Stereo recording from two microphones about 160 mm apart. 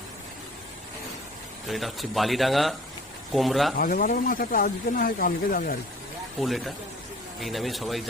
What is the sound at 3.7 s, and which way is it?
Speech, 65° left (ahead or behind).